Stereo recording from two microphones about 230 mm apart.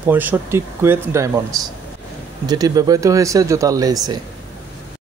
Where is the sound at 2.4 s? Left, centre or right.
Centre.